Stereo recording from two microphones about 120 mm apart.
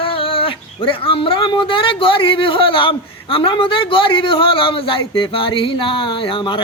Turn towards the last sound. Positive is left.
turn(degrees=45)  # may be behind; listen again after turning